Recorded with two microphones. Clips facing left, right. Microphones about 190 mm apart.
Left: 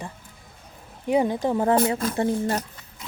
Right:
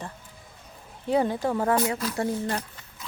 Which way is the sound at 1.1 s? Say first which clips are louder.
Left 2 dB; 15° left (ahead or behind).